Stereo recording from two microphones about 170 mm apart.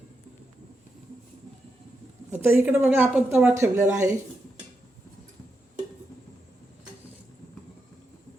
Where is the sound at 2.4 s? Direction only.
15° right (ahead or behind).